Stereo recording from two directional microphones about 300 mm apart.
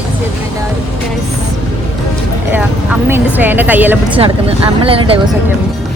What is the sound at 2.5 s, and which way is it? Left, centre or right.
Speech, centre.